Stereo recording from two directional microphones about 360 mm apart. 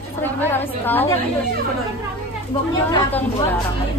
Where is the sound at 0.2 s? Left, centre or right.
Centre.